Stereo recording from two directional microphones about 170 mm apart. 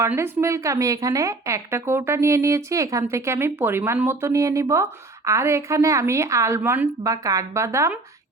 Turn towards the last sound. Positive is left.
turn(degrees=-15)  # may be behind; listen again after turning